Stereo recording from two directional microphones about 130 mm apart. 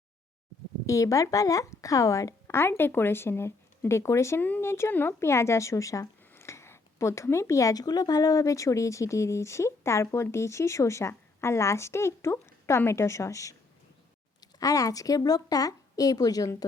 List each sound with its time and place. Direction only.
0.9 s speech: 25° left (ahead or behind)